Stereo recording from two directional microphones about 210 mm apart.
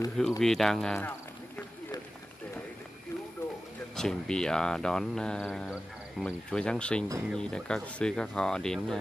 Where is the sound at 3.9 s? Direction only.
5° left (ahead or behind).